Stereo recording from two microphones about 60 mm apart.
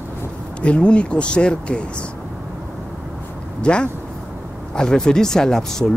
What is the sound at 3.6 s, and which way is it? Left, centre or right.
Speech, centre.